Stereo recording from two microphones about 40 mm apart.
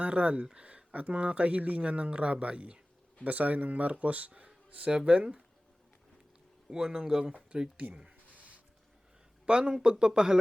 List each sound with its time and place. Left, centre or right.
0.0 s speech: right
3.2 s speech: right
4.3 s a sound: right
4.9 s speech: right
6.7 s speech: centre
7.5 s speech: right
9.5 s speech: right